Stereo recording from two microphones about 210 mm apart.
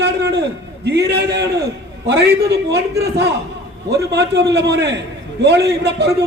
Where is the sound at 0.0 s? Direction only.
55° right (ahead or behind).